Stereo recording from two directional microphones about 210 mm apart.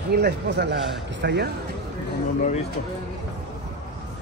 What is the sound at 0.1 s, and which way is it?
Speech, 50° right (ahead or behind).